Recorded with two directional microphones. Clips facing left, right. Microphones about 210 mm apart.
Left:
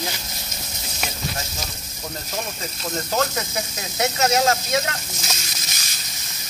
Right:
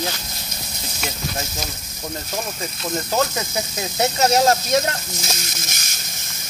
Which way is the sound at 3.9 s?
30° right (ahead or behind).